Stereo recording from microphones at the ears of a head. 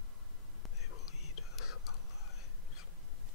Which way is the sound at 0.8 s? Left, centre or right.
Left.